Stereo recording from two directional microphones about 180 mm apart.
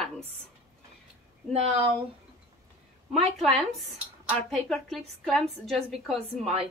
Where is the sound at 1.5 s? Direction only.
35° right (ahead or behind).